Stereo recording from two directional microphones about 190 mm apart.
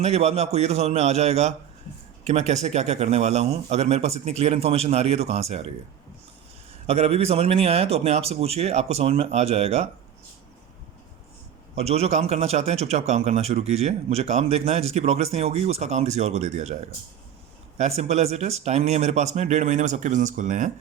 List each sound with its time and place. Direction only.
0.0 s a man's voice: 35° right (ahead or behind)
6.8 s a man's voice: 30° right (ahead or behind)
11.8 s a man's voice: 35° right (ahead or behind)